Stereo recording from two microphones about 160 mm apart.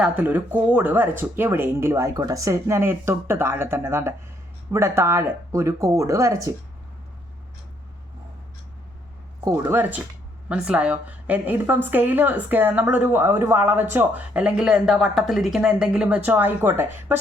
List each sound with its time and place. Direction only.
0.0 s speech: 10° right (ahead or behind)
9.4 s speech: 20° right (ahead or behind)